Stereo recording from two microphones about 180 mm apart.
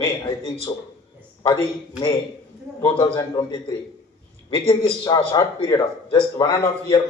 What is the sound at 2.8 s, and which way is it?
A man's voice, 25° left (ahead or behind).